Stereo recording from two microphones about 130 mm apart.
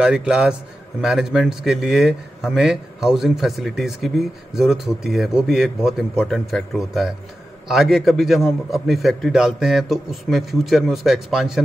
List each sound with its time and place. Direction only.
0.0 s a man's voice: 5° right (ahead or behind)